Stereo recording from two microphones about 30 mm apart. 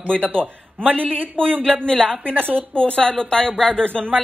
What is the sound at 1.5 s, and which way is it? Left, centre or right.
Speech, right.